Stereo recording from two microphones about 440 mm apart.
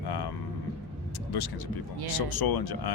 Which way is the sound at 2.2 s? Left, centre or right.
Left.